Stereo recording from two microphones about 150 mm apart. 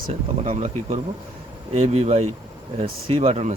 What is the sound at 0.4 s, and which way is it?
Speech, 50° right (ahead or behind).